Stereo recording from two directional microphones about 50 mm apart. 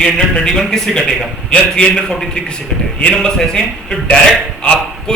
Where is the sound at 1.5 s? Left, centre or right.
Left.